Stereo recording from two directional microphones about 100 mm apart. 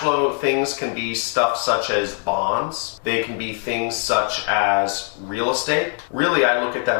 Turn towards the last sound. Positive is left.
turn(degrees=15)  # may be behind; listen again after turning